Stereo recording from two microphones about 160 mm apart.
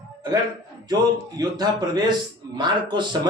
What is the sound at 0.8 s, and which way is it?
A man's voice, 25° right (ahead or behind).